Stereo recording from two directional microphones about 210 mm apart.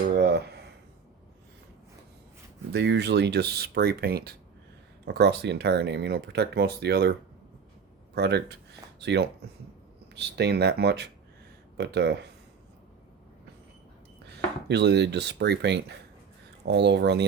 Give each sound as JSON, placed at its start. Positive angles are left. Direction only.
{"t": 0.2, "sound": "a sound", "side_deg": -50}
{"t": 2.7, "sound": "speech", "side_deg": -55}
{"t": 14.7, "sound": "speech", "side_deg": -55}